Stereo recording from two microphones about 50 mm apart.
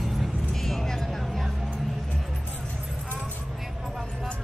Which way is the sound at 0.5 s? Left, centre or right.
Centre.